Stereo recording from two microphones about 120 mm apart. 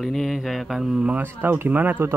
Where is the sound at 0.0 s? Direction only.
Centre (ahead or behind).